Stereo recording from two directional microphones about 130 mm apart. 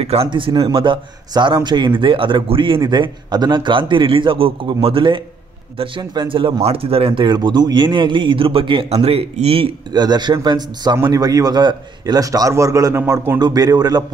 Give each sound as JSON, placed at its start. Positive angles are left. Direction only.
{"t": 0.0, "sound": "a man's voice", "side_deg": -50}
{"t": 9.9, "sound": "a man's voice", "side_deg": -35}
{"t": 13.4, "sound": "a man's voice", "side_deg": -30}